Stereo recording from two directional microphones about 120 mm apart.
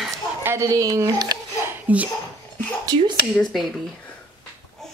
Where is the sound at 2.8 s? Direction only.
35° right (ahead or behind).